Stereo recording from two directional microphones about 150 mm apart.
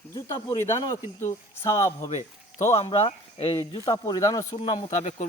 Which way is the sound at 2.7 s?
40° left (ahead or behind).